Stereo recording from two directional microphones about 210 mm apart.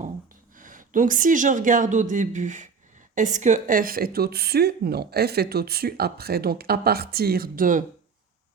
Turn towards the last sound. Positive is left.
turn(degrees=-40)  # may be behind; listen again after turning